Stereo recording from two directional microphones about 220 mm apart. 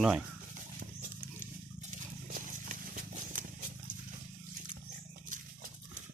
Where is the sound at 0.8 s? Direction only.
40° right (ahead or behind).